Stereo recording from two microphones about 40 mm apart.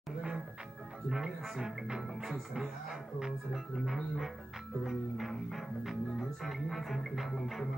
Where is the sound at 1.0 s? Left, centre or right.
Centre.